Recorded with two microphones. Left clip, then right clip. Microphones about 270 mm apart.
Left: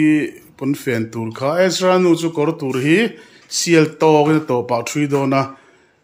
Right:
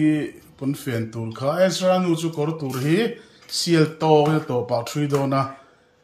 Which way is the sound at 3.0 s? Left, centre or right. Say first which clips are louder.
Left 2 dB; centre.